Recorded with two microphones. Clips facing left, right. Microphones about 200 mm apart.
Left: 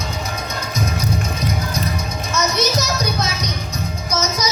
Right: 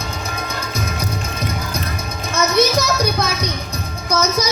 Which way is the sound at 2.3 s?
55° right (ahead or behind).